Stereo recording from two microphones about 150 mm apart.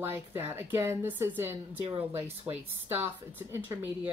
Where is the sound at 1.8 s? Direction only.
40° right (ahead or behind).